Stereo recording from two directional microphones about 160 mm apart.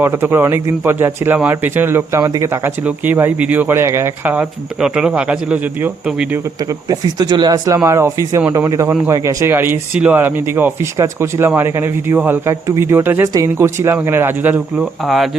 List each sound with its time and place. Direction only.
0.0 s speech: 15° right (ahead or behind)
6.6 s speech: 25° right (ahead or behind); by 15.3 s centre (ahead or behind)